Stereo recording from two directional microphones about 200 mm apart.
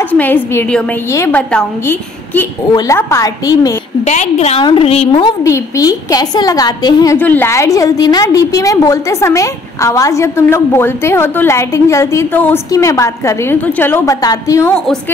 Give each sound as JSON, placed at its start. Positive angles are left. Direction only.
{"t": 0.1, "sound": "a woman's voice", "side_deg": 10}
{"t": 4.0, "sound": "a woman's voice", "side_deg": 35}
{"t": 5.4, "sound": "a woman's voice", "side_deg": 15}